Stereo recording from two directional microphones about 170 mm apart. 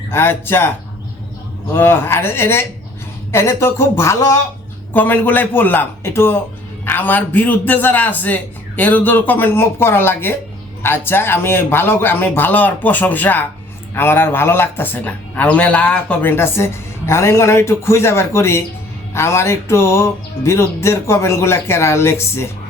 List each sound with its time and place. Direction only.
0.1 s a man's voice: 15° left (ahead or behind)
1.7 s a man's voice: 15° left (ahead or behind)